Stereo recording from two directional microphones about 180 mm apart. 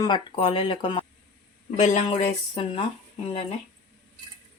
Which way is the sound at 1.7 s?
40° left (ahead or behind).